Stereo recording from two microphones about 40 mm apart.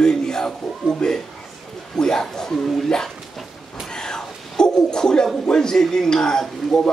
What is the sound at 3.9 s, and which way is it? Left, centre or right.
A man's voice, centre.